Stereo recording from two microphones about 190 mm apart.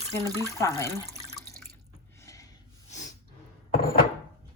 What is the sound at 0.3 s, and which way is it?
Speech, 20° right (ahead or behind).